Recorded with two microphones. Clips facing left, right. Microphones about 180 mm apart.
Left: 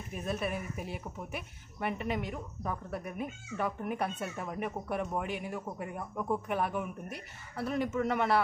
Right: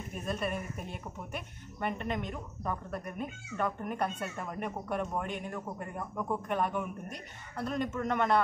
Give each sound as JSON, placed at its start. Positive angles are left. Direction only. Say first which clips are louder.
{"t": 0.1, "sound": "speech", "louder": "even", "side_deg": 5}